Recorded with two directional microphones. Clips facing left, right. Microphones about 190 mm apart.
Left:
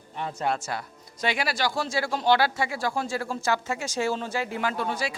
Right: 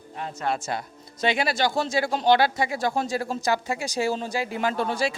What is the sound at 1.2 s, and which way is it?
Speech, 25° right (ahead or behind).